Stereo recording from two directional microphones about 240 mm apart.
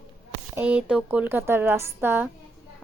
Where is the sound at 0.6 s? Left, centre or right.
Centre.